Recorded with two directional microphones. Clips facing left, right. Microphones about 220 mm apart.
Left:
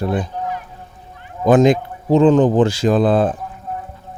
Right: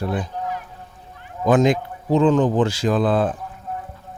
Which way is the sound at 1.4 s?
25° left (ahead or behind).